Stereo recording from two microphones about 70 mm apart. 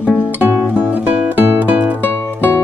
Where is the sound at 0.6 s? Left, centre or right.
Right.